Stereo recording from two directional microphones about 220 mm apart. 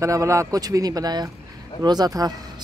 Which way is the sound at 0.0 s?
15° right (ahead or behind).